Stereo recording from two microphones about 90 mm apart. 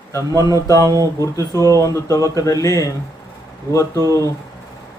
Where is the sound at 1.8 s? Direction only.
35° left (ahead or behind).